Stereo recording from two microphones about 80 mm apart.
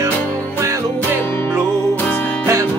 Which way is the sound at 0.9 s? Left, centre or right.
Left.